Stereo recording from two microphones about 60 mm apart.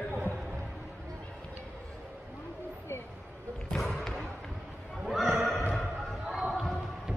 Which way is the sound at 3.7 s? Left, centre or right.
Centre.